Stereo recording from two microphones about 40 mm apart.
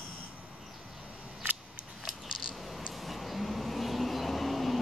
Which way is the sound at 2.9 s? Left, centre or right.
Centre.